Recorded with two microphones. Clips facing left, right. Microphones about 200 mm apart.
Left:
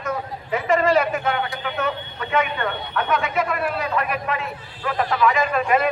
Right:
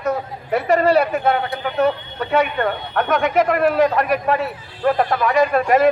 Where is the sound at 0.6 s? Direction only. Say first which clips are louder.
Right 3 dB; 40° right (ahead or behind).